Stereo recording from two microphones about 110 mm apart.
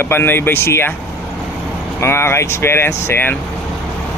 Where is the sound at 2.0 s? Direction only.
25° left (ahead or behind).